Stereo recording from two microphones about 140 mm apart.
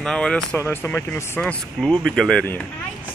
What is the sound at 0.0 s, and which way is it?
Speech, 5° left (ahead or behind).